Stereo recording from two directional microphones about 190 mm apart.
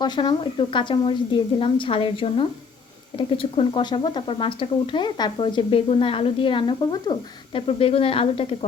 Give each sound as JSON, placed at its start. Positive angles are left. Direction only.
{"t": 0.0, "sound": "speech", "side_deg": 25}